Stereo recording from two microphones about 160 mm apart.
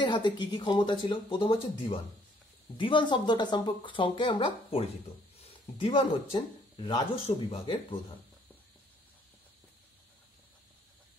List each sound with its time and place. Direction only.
0.0 s speech: 30° left (ahead or behind)